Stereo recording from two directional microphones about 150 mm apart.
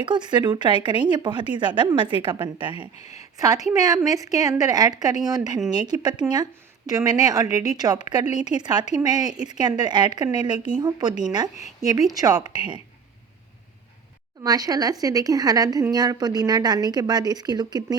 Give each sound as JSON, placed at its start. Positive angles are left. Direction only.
{"t": 0.0, "sound": "speech", "side_deg": -30}
{"t": 2.9, "sound": "speech", "side_deg": 45}
{"t": 3.2, "sound": "a woman's voice", "side_deg": -25}
{"t": 14.4, "sound": "a woman's voice", "side_deg": -25}